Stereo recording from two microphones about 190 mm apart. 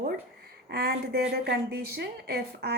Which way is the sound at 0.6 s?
55° right (ahead or behind).